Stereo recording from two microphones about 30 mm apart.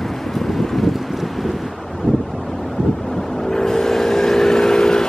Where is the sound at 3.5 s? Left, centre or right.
Centre.